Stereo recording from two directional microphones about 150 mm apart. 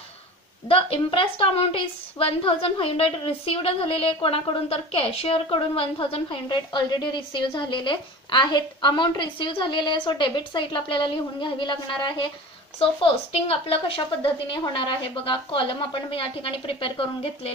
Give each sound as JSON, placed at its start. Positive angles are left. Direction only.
{"t": 0.7, "sound": "a woman's voice", "side_deg": 40}